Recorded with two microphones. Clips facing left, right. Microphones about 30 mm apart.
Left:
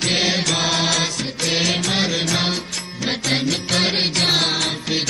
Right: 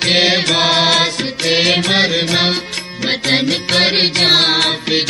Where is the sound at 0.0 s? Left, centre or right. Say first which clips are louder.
Right 6 dB; right.